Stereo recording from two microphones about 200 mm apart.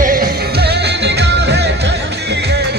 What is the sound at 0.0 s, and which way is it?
Music, 45° right (ahead or behind).